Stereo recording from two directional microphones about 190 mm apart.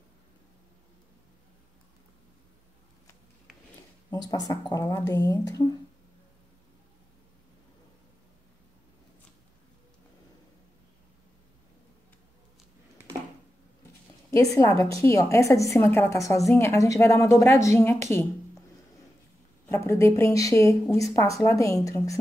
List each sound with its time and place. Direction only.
4.1 s speech: 20° left (ahead or behind)
14.3 s a woman's voice: 15° left (ahead or behind)
19.7 s a woman's voice: 10° left (ahead or behind)